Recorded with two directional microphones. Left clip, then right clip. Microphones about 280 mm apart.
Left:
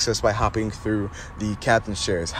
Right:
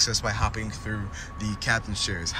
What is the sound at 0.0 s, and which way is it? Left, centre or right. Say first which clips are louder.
Speech: left 5 dB; centre.